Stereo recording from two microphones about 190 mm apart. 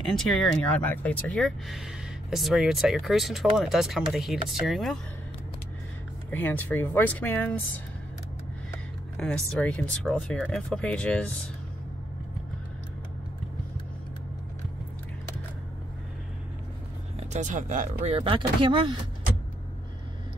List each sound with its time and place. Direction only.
0.0 s speech: centre (ahead or behind)
6.3 s speech: 10° left (ahead or behind)
8.7 s speech: 5° left (ahead or behind)
17.2 s speech: 40° right (ahead or behind)
18.1 s speech: 25° right (ahead or behind)